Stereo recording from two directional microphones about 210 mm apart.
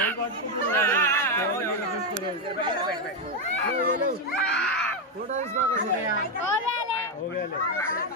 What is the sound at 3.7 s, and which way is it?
Speech, 40° right (ahead or behind).